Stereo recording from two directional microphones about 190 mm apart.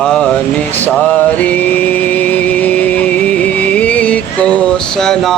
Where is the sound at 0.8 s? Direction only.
10° left (ahead or behind).